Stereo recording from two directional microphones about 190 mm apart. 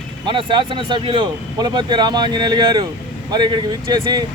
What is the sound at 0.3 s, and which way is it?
Speech, 25° right (ahead or behind).